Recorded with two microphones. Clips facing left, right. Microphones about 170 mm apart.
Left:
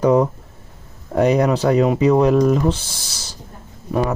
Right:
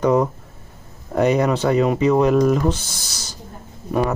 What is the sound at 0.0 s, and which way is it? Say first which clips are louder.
Speech: left 2 dB; 5° left (ahead or behind).